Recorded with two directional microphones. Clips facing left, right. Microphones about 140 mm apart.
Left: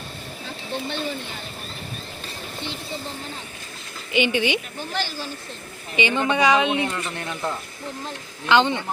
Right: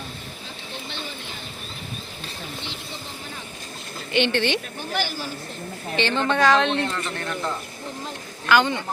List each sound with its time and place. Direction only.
4.1 s speech: 5° left (ahead or behind)
6.0 s speech: 10° left (ahead or behind)
8.4 s speech: 25° left (ahead or behind)